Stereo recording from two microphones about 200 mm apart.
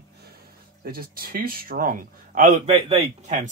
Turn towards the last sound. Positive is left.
turn(degrees=-30)  # may be behind; listen again after turning